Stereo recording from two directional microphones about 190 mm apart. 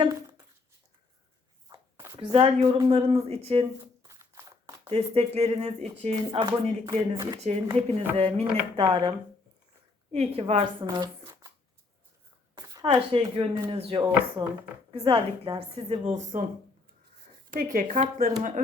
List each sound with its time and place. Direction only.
1.7 s speech: 20° right (ahead or behind)
4.0 s a sound: 15° right (ahead or behind)
4.9 s speech: 30° right (ahead or behind)
6.8 s speech: 20° right (ahead or behind)
7.8 s speech: 35° right (ahead or behind)
10.8 s a sound: 20° right (ahead or behind)
12.5 s speech: 20° right (ahead or behind); by 16.5 s 40° right (ahead or behind)
17.5 s speech: 45° right (ahead or behind)